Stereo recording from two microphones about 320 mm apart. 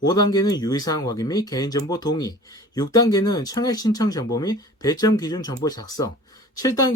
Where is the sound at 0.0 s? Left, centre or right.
Centre.